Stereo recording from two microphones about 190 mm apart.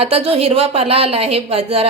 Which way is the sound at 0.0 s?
30° right (ahead or behind).